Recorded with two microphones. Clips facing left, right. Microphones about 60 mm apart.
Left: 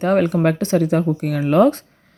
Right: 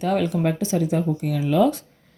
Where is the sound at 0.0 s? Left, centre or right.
Left.